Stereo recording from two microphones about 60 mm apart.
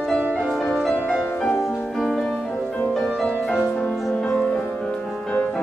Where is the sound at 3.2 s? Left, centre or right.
Centre.